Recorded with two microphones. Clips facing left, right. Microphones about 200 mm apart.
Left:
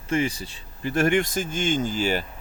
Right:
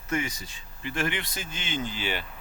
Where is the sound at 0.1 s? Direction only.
30° left (ahead or behind).